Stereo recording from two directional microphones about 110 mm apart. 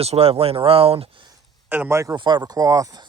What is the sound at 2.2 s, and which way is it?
Speech, 40° right (ahead or behind).